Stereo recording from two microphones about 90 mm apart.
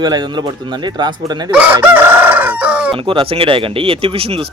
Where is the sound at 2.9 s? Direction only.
80° right.